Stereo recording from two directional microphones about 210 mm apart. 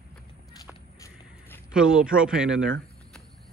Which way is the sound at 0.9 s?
15° left (ahead or behind).